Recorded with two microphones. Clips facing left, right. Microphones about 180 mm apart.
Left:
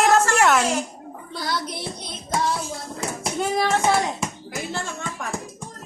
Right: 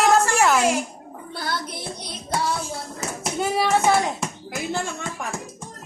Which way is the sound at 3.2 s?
5° right (ahead or behind).